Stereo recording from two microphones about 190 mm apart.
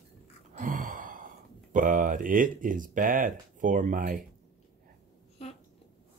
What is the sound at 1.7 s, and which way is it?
Speech, 45° right (ahead or behind).